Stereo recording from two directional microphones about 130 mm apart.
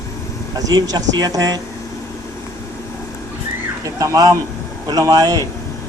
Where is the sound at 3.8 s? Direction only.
25° right (ahead or behind).